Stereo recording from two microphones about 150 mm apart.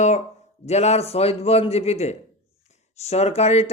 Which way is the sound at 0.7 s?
45° left (ahead or behind).